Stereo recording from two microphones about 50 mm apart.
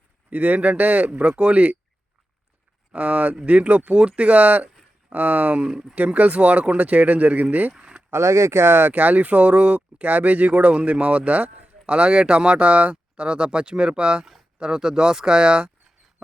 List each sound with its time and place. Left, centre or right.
0.3 s speech: right
1.3 s speech: right
2.9 s speech: right
7.8 s a sound: right
8.1 s speech: right
8.9 s speech: right; by 15.7 s centre